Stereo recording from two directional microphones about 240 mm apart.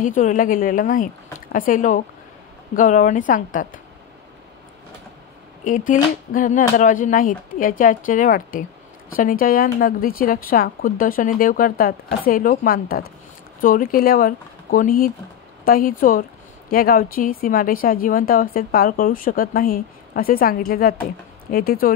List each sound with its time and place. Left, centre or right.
0.0 s speech: left
5.6 s speech: left